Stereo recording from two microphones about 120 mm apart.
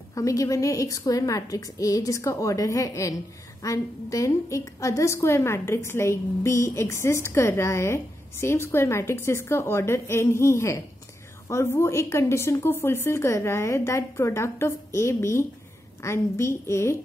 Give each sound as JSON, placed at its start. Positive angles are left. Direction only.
{"t": 0.1, "sound": "a woman's voice", "side_deg": 30}